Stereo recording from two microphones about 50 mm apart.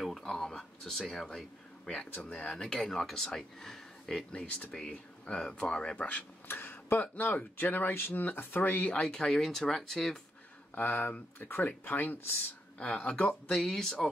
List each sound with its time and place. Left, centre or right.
0.0 s a sound: centre
2.1 s speech: left
2.5 s speech: centre
4.3 s speech: centre
6.4 s speech: left
9.0 s speech: centre
10.7 s speech: left
12.7 s speech: left
13.6 s speech: centre